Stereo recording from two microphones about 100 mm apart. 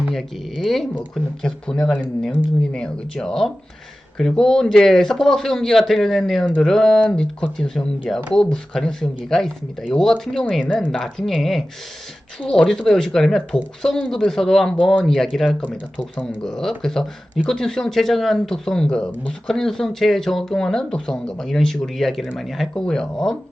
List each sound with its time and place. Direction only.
0.1 s speech: centre (ahead or behind)
6.4 s speech: 15° left (ahead or behind)
6.7 s speech: 5° left (ahead or behind)